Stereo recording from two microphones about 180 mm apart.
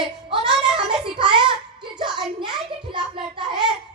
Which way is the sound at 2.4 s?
25° right (ahead or behind).